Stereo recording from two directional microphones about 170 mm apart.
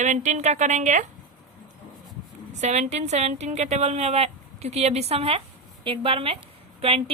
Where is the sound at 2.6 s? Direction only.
40° right (ahead or behind).